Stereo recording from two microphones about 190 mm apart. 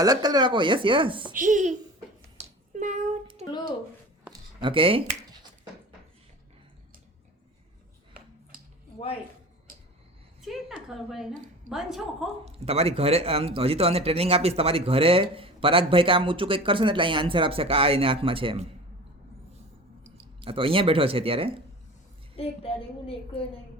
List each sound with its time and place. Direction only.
0.0 s speech: 20° right (ahead or behind)
1.3 s a woman's voice: 45° right (ahead or behind)
2.4 s a sound: 40° right (ahead or behind)
4.3 s a sound: 25° right (ahead or behind)
10.4 s a woman's voice: centre (ahead or behind)
12.5 s speech: 30° right (ahead or behind)
20.1 s speech: 30° right (ahead or behind)
22.4 s a woman's voice: 30° left (ahead or behind)